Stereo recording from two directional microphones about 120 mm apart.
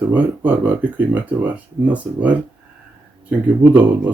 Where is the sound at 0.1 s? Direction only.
15° right (ahead or behind).